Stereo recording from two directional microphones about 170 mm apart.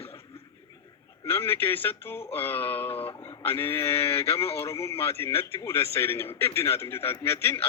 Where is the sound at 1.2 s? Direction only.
15° left (ahead or behind).